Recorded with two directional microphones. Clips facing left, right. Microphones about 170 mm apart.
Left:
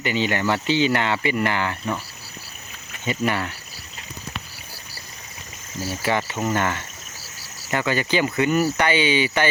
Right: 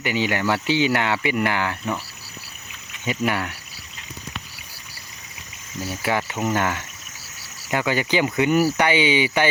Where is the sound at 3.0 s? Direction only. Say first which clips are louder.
Even; 10° right (ahead or behind).